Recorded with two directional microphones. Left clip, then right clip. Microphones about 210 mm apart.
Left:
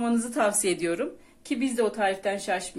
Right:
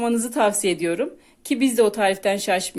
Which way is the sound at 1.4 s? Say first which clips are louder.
Right 8 dB; 40° right (ahead or behind).